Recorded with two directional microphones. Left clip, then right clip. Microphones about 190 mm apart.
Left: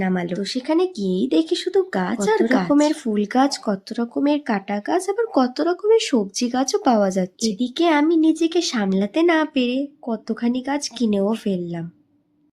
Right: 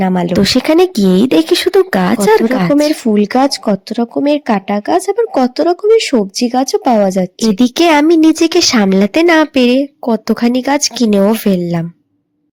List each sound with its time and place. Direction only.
0.0 s speech: 35° right (ahead or behind)
0.3 s speech: 50° right (ahead or behind); by 7.5 s 25° right (ahead or behind)
7.6 s speech: 40° right (ahead or behind)